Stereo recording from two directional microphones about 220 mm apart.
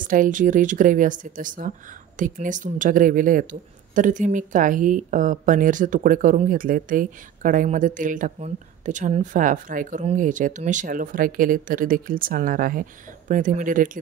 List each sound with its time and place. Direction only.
0.0 s a woman's voice: 40° right (ahead or behind)